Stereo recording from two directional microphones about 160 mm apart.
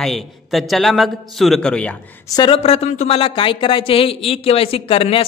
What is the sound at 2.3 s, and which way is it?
Speech, 25° left (ahead or behind).